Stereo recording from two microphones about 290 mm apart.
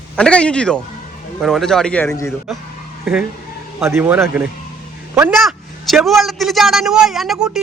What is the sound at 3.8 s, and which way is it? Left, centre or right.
A man's voice, centre.